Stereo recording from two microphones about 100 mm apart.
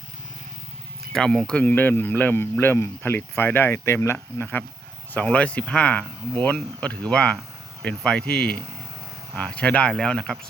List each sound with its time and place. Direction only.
1.1 s speech: 5° left (ahead or behind)